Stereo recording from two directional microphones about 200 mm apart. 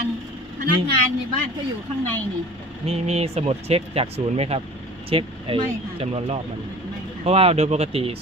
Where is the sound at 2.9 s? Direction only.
30° right (ahead or behind).